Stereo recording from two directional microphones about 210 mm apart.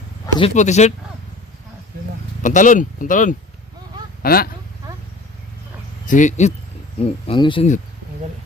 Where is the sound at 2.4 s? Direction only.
35° left (ahead or behind).